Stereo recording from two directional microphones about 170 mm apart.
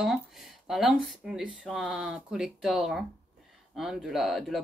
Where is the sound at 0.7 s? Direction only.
Centre (ahead or behind).